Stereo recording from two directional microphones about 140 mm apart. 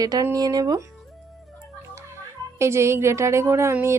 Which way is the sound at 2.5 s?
20° right (ahead or behind).